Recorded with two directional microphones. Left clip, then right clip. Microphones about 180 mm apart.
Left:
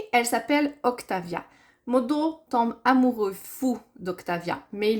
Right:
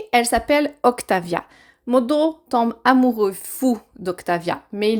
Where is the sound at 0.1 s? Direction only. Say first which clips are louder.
Right 6 dB; 35° right (ahead or behind).